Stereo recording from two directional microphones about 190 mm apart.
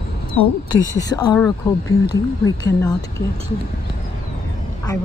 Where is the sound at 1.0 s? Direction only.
20° left (ahead or behind).